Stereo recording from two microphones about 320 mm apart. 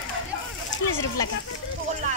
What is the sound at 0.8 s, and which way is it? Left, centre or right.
Speech, left.